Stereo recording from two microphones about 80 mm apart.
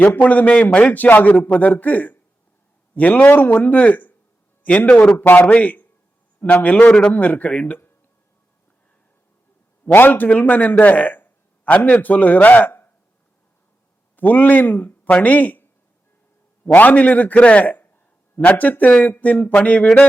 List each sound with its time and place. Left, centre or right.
0.0 s a man's voice: left
9.8 s a man's voice: left
14.2 s speech: left
16.7 s a man's voice: centre